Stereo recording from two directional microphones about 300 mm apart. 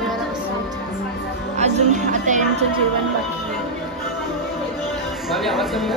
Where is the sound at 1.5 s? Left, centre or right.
Right.